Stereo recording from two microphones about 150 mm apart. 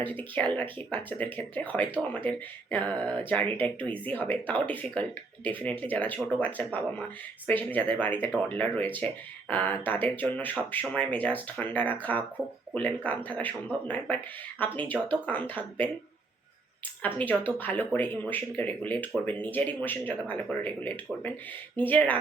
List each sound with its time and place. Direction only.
0.0 s speech: 10° left (ahead or behind)
17.2 s speech: 10° left (ahead or behind)